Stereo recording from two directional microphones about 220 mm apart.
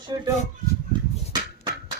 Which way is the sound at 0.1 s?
20° right (ahead or behind).